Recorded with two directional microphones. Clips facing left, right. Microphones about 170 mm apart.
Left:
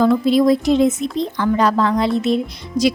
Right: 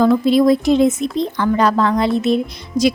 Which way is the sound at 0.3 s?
55° right (ahead or behind).